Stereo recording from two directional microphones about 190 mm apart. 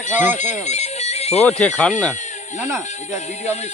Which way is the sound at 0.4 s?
35° left (ahead or behind).